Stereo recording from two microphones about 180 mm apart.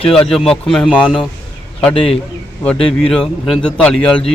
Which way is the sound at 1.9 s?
30° left (ahead or behind).